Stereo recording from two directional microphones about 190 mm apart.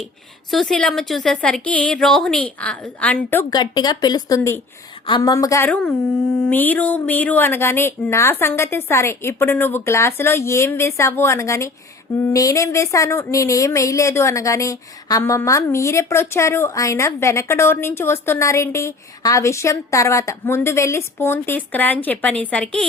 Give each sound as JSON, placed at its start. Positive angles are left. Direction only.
{"t": 0.5, "sound": "a woman's voice", "side_deg": 5}
{"t": 3.5, "sound": "speech", "side_deg": 20}